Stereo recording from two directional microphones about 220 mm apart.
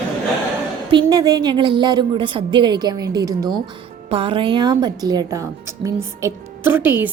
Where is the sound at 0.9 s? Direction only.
20° right (ahead or behind).